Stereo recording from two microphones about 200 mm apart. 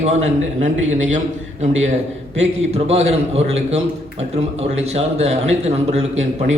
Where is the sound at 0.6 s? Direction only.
35° right (ahead or behind).